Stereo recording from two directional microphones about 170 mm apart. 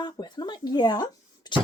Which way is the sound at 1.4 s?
25° left (ahead or behind).